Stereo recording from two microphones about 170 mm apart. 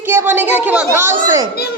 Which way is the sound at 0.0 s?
15° right (ahead or behind).